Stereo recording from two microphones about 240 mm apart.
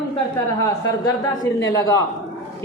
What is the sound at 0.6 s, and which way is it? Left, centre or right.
Speech, centre.